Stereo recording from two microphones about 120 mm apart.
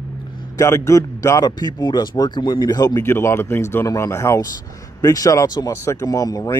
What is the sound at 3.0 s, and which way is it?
Speech, 20° left (ahead or behind).